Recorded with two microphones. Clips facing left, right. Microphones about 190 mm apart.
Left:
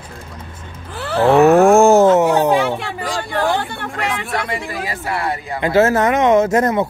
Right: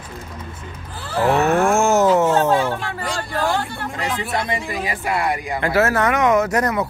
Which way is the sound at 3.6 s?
60° left (ahead or behind).